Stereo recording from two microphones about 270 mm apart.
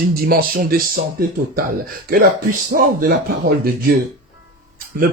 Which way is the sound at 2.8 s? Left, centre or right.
Right.